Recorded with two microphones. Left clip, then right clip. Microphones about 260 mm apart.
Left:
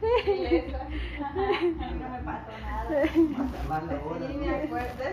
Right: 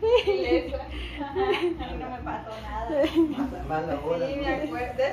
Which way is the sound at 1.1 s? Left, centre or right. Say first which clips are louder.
Right 2 dB; right.